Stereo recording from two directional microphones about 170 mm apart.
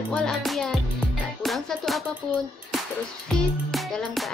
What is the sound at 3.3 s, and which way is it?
Music, centre (ahead or behind).